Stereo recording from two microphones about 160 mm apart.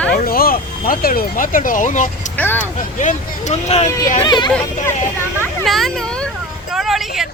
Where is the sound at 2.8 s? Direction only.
50° left (ahead or behind).